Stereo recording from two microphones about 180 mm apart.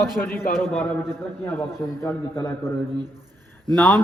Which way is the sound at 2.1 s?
15° left (ahead or behind).